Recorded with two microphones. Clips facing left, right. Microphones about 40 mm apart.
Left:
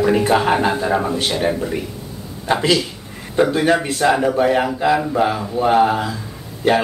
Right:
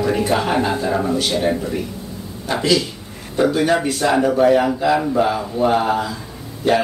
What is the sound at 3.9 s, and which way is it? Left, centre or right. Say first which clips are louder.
Speech: even; centre.